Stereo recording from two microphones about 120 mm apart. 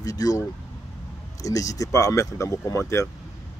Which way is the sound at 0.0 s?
30° left (ahead or behind).